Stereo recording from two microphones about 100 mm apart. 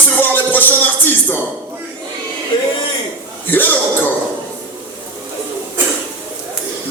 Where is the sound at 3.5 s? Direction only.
20° left (ahead or behind).